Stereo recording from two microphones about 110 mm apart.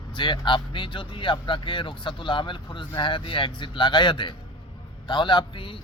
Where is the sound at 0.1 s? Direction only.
45° left (ahead or behind).